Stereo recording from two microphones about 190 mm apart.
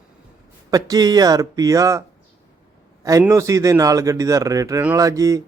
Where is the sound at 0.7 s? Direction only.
20° right (ahead or behind).